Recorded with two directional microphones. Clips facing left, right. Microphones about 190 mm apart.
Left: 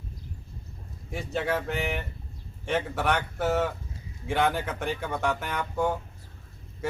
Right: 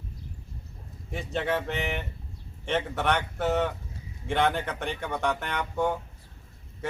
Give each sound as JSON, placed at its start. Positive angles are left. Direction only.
{"t": 1.1, "sound": "speech", "side_deg": 0}